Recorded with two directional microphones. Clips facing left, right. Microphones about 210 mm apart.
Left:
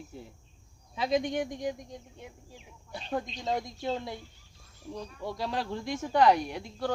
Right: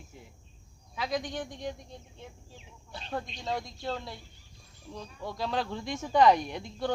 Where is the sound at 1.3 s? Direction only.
15° left (ahead or behind).